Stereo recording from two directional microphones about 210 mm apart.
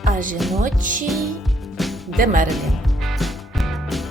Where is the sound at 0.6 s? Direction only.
40° right (ahead or behind).